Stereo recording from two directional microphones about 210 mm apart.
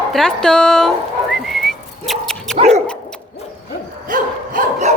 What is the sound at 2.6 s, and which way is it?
Dog, 30° right (ahead or behind).